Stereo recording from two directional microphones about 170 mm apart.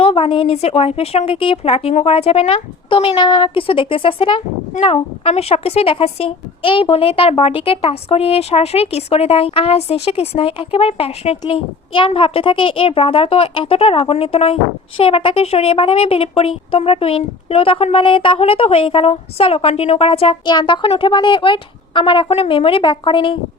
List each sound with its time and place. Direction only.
0.0 s speech: 35° left (ahead or behind)